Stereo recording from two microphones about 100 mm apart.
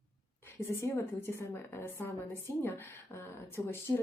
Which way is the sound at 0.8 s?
25° left (ahead or behind).